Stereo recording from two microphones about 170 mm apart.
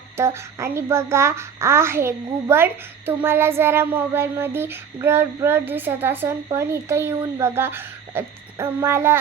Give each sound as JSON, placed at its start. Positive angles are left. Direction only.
{"t": 0.2, "sound": "child singing", "side_deg": -15}